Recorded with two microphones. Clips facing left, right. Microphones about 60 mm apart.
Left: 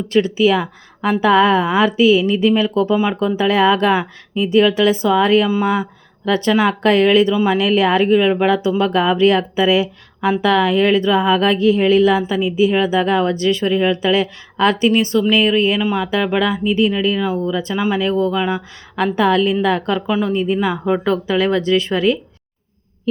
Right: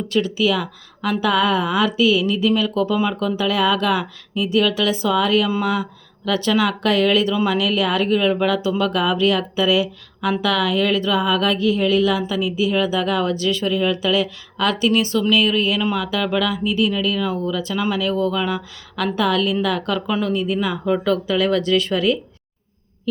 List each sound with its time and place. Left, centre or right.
0.1 s speech: left
2.9 s speech: centre
19.1 s speech: left
20.1 s speech: centre
20.3 s speech: left